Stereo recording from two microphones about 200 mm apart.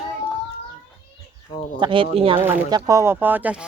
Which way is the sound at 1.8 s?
25° right (ahead or behind).